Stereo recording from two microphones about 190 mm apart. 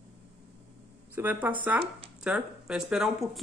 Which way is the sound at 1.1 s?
10° right (ahead or behind).